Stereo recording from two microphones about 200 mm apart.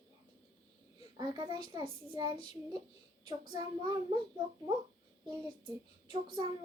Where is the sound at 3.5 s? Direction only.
20° right (ahead or behind).